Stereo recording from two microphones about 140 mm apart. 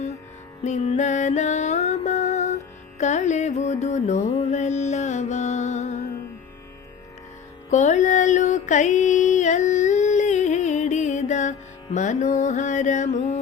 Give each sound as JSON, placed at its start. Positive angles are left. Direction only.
{"t": 0.6, "sound": "music", "side_deg": 55}
{"t": 3.0, "sound": "carnatic music", "side_deg": 55}
{"t": 7.7, "sound": "mantra", "side_deg": 60}